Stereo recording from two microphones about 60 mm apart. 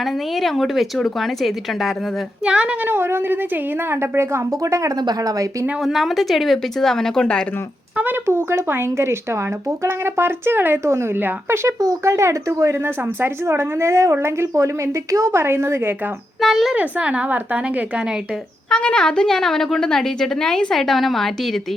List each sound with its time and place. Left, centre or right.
0.0 s speech: centre
2.4 s speech: centre
2.8 s a woman's voice: right
4.6 s speech: right
5.8 s speech: centre
7.9 s a woman's voice: right
10.8 s a woman's voice: right
11.2 s a woman's voice: right
12.0 s speech: right
12.7 s a woman's voice: right
13.4 s a woman's voice: right
16.4 s speech: centre
16.7 s speech: right
18.7 s a woman's voice: centre